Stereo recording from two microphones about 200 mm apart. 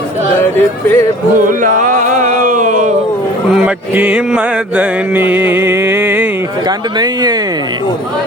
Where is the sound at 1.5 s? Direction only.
40° right (ahead or behind).